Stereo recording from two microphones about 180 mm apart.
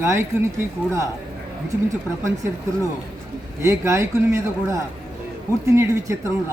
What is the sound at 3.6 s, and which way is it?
Speech, 15° right (ahead or behind).